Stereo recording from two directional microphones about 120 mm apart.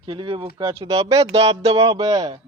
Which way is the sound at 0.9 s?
55° right (ahead or behind).